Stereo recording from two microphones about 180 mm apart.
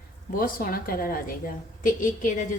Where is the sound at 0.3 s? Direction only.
50° left (ahead or behind).